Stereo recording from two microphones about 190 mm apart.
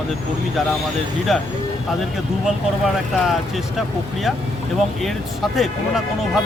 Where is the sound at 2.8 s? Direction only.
Centre (ahead or behind).